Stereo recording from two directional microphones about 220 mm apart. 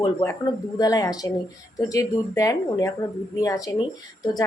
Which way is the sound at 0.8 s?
15° left (ahead or behind).